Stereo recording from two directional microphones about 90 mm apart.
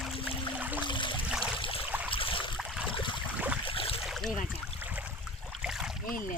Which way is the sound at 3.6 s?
90° left.